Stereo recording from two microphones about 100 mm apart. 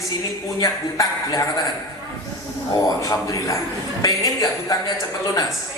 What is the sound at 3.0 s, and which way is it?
Speech, 30° left (ahead or behind).